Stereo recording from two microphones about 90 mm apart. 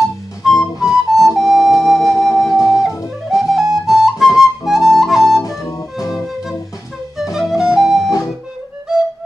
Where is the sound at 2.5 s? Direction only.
40° left (ahead or behind).